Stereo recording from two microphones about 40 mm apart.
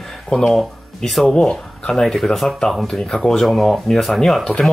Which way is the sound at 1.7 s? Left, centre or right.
Centre.